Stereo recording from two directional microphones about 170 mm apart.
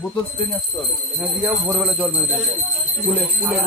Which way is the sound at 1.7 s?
10° right (ahead or behind).